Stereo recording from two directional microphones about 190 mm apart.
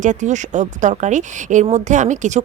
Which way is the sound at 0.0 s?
40° right (ahead or behind).